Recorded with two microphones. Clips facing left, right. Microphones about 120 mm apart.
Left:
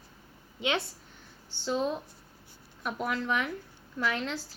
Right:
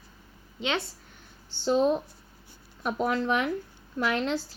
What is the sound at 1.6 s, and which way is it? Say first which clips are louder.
A woman's voice: right 7 dB; 25° right (ahead or behind).